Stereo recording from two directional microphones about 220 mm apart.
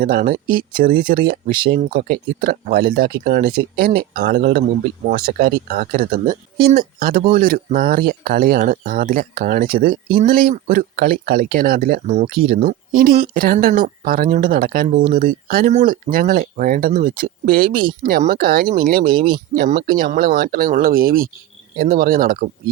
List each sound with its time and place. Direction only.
0.0 s speech: 40° right (ahead or behind)